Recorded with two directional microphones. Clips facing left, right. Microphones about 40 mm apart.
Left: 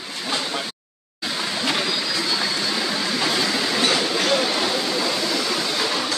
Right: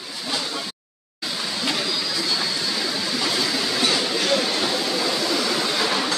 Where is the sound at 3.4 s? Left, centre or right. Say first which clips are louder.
Left 2 dB; centre.